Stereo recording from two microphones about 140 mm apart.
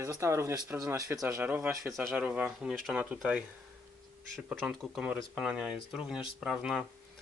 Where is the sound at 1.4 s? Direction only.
10° right (ahead or behind).